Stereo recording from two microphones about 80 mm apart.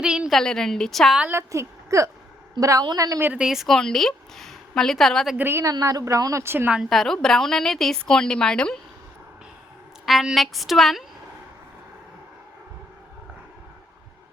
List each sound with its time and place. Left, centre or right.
0.0 s a woman's voice: centre
0.3 s a woman's voice: centre
1.3 s a woman's voice: right
3.3 s a woman's voice: centre
5.4 s speech: right
5.8 s speech: right
6.4 s speech: right
6.9 s a woman's voice: centre
10.1 s a woman's voice: centre